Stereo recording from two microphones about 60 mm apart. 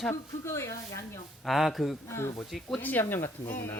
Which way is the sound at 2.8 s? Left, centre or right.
Left.